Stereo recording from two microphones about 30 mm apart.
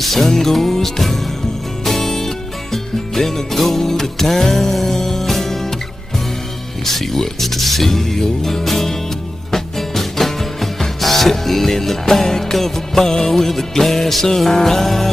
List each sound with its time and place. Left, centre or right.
0.0 s speech: centre
1.9 s music: centre
6.8 s speech: centre
9.5 s music: centre